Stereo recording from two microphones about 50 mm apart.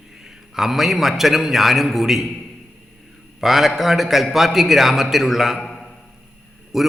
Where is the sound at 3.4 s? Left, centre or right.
Centre.